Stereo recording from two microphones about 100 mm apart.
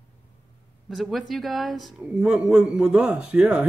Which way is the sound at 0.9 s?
Centre (ahead or behind).